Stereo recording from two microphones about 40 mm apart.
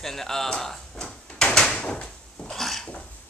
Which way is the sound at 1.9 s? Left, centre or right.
Left.